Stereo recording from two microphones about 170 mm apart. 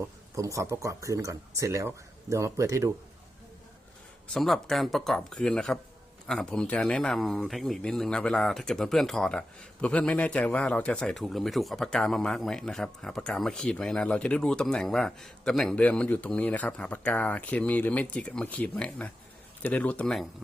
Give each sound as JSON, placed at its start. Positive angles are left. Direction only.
{"t": 0.0, "sound": "speech", "side_deg": -20}
{"t": 4.4, "sound": "speech", "side_deg": 0}